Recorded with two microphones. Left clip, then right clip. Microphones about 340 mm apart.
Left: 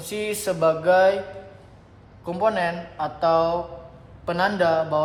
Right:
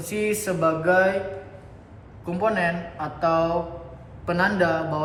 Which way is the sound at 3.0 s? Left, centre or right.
Left.